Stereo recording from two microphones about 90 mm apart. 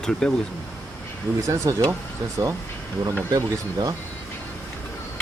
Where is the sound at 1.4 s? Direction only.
35° right (ahead or behind).